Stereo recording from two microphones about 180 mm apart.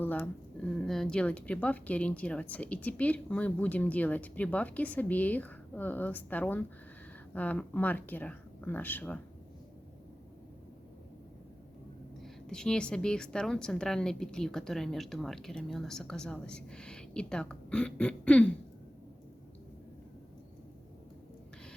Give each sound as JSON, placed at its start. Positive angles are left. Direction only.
{"t": 0.0, "sound": "speech", "side_deg": 10}
{"t": 12.2, "sound": "a woman's voice", "side_deg": 5}